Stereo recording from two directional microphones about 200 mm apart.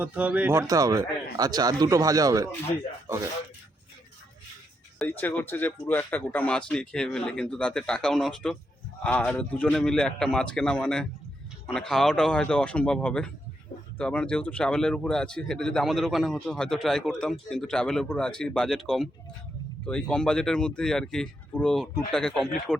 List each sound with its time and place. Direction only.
0.0 s a man's voice: 5° right (ahead or behind)
4.9 s speech: 10° left (ahead or behind)